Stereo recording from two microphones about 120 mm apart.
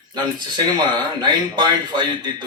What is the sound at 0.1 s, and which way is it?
Speech, 40° right (ahead or behind).